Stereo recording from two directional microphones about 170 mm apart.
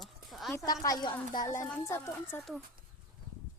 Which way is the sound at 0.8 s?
25° left (ahead or behind).